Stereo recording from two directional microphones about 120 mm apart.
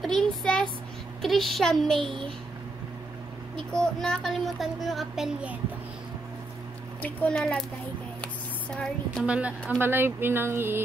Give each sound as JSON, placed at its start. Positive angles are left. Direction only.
{"t": 0.0, "sound": "child singing", "side_deg": 0}
{"t": 1.2, "sound": "speech", "side_deg": 0}
{"t": 3.5, "sound": "speech", "side_deg": 5}
{"t": 7.0, "sound": "a child's voice", "side_deg": 10}
{"t": 8.2, "sound": "a sound", "side_deg": 10}
{"t": 9.2, "sound": "a woman's voice", "side_deg": -10}